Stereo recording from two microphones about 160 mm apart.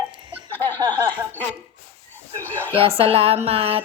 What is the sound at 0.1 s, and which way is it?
Laughter, 30° right (ahead or behind).